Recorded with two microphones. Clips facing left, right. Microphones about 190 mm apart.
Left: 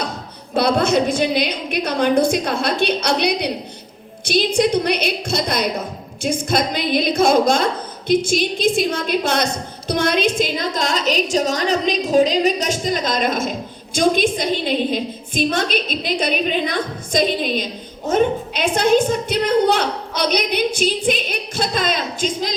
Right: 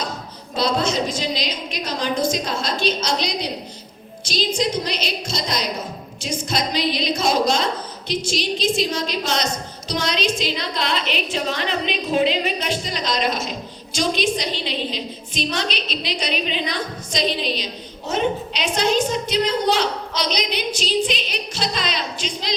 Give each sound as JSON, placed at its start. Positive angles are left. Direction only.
{"t": 0.5, "sound": "a woman's voice", "side_deg": 60}